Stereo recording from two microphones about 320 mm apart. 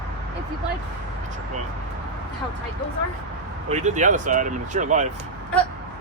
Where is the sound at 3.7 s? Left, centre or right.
Right.